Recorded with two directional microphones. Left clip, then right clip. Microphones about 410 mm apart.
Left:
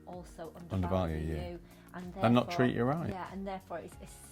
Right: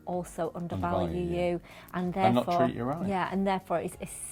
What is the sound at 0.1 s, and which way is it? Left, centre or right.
A woman's voice, right.